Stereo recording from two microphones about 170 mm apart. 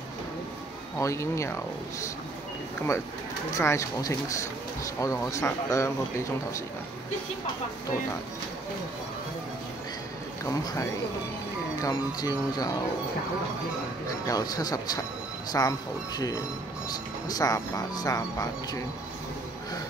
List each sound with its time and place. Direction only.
0.9 s speech: 15° left (ahead or behind)
3.5 s speech: 15° left (ahead or behind)
10.4 s speech: 20° left (ahead or behind)
14.2 s speech: 20° left (ahead or behind)
17.3 s speech: 20° left (ahead or behind)